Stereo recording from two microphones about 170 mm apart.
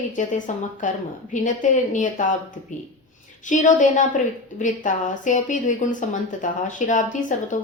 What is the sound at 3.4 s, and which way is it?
Speech, 50° left (ahead or behind).